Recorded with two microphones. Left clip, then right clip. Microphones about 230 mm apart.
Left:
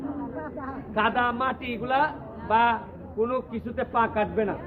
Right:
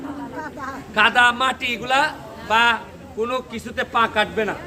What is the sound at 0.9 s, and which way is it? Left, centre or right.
A man's voice, centre.